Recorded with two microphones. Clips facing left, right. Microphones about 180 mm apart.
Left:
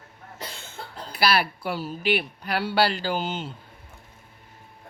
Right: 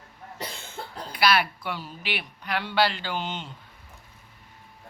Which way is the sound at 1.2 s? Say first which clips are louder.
Even; 35° left (ahead or behind).